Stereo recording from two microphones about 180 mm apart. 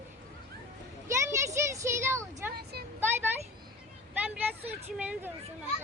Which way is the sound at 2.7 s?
60° right (ahead or behind).